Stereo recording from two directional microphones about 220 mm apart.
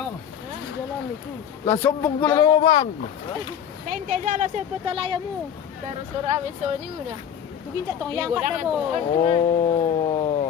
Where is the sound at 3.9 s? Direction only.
35° right (ahead or behind).